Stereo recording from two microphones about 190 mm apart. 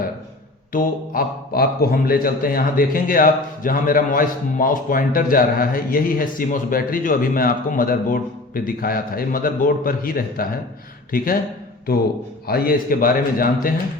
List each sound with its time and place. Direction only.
0.7 s a man's voice: 50° left (ahead or behind)
12.5 s a man's voice: 50° left (ahead or behind)